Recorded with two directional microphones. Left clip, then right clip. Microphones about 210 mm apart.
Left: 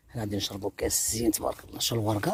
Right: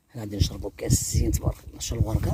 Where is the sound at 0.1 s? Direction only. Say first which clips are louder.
Left 1 dB; 15° left (ahead or behind).